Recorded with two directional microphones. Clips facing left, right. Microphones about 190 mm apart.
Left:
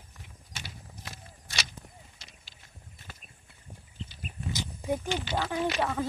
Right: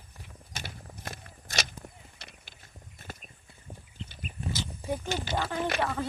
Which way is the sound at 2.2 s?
60° right (ahead or behind).